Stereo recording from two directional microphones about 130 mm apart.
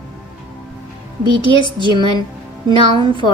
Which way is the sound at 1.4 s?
35° left (ahead or behind).